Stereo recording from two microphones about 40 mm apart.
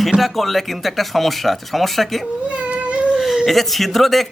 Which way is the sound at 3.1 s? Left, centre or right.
Centre.